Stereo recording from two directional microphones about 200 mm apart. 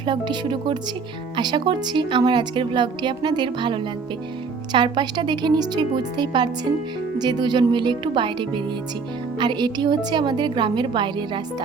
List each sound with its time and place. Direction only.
0.0 s speech: 25° right (ahead or behind)